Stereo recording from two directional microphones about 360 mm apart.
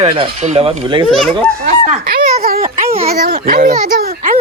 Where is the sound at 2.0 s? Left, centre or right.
Right.